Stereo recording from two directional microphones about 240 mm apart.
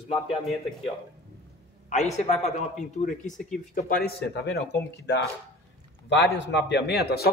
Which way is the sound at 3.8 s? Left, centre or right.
Left.